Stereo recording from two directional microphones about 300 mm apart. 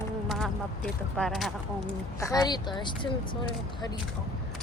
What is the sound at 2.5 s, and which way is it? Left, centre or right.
Speech, centre.